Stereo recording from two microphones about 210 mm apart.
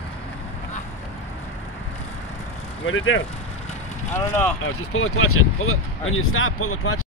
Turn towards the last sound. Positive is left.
turn(degrees=90)